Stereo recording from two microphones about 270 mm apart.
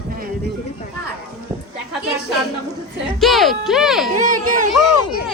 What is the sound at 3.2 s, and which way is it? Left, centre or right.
Speech, centre.